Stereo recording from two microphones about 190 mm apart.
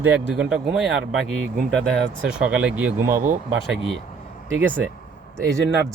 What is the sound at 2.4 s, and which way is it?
Speech, 5° right (ahead or behind).